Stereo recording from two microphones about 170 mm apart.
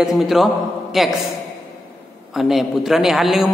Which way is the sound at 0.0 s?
Centre (ahead or behind).